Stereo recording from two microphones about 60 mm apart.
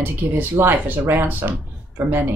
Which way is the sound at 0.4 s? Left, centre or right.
Right.